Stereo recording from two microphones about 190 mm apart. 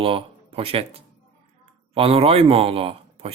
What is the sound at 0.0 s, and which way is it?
Speech, 30° right (ahead or behind).